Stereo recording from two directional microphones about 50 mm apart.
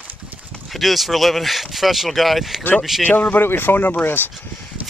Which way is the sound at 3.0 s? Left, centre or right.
Left.